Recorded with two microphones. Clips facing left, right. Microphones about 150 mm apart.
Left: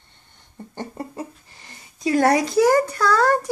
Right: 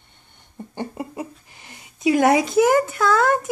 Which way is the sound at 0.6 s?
15° right (ahead or behind).